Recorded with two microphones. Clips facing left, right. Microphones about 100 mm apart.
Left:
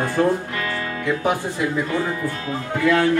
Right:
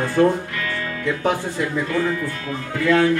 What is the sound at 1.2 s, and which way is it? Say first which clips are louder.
Speech: right 2 dB; 5° left (ahead or behind).